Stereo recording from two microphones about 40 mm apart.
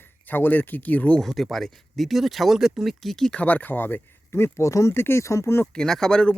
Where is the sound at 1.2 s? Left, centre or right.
Centre.